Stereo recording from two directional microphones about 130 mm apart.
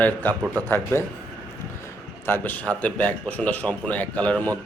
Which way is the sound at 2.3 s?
15° left (ahead or behind).